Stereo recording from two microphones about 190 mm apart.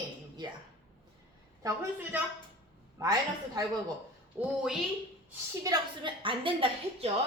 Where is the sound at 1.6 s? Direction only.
10° right (ahead or behind).